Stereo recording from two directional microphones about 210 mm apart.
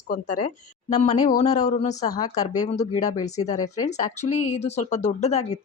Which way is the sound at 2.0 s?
20° left (ahead or behind).